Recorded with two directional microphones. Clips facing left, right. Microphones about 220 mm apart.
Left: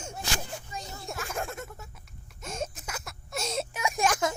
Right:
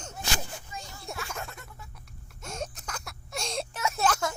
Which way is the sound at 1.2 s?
50° left (ahead or behind).